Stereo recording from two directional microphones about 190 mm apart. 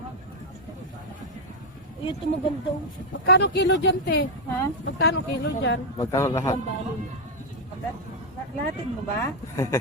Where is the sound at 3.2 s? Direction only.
65° left (ahead or behind).